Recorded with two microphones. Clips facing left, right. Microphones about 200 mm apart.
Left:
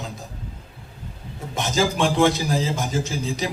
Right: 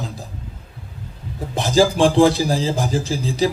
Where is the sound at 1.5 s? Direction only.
35° right (ahead or behind).